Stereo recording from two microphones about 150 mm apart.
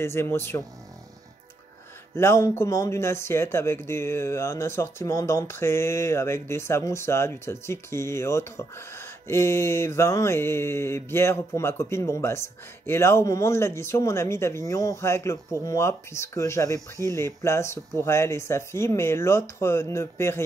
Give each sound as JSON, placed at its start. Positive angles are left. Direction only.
{"t": 0.0, "sound": "speech", "side_deg": 15}
{"t": 2.1, "sound": "speech", "side_deg": 15}